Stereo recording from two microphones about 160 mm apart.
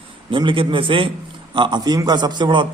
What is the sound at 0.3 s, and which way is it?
A man's voice, 30° right (ahead or behind).